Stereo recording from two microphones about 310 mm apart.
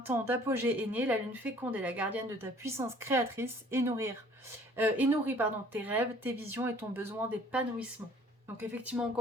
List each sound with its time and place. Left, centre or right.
0.0 s speech: centre